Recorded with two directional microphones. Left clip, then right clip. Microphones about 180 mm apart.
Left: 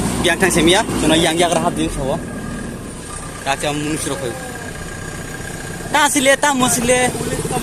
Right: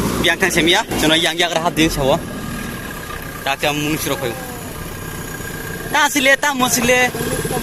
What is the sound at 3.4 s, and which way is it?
Speech, 5° right (ahead or behind).